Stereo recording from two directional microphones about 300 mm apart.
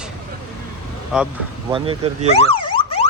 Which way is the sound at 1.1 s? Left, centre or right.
Centre.